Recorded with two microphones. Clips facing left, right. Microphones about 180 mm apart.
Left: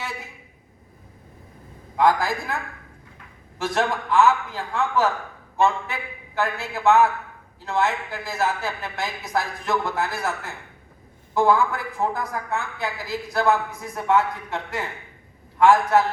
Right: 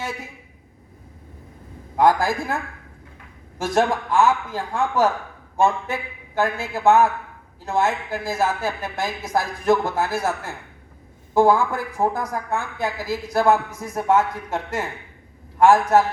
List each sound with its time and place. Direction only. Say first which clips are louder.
2.0 s speech: right 2 dB; 50° right (ahead or behind)
3.6 s speech: right 4 dB; 45° right (ahead or behind)
11.3 s speech: right 3 dB; 45° right (ahead or behind)